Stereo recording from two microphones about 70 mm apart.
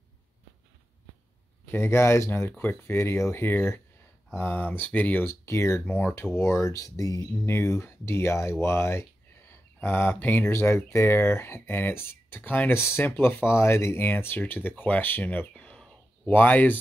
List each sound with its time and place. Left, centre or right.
1.7 s speech: left
5.2 s speech: left
7.4 s speech: left
10.5 s speech: left
15.5 s a sound: centre
16.3 s speech: left